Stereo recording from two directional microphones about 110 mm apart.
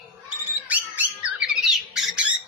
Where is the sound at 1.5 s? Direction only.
5° right (ahead or behind).